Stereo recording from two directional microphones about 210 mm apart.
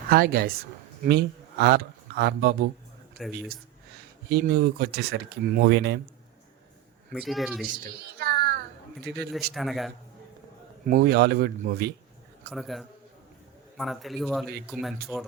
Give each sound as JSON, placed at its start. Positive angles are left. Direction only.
{"t": 0.1, "sound": "speech", "side_deg": -45}
{"t": 4.3, "sound": "speech", "side_deg": -50}
{"t": 7.1, "sound": "speech", "side_deg": 0}
{"t": 7.9, "sound": "a sound", "side_deg": -50}
{"t": 9.5, "sound": "speech", "side_deg": 0}
{"t": 10.8, "sound": "speech", "side_deg": -45}
{"t": 12.5, "sound": "speech", "side_deg": 0}